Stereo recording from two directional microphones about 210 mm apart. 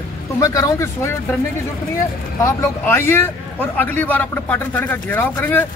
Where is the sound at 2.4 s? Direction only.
10° left (ahead or behind).